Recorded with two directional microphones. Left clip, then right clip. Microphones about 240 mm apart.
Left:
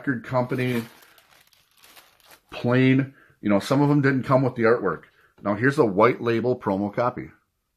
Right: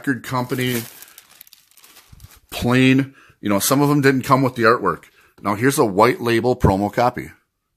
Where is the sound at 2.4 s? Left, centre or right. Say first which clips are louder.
Right 4 dB; right.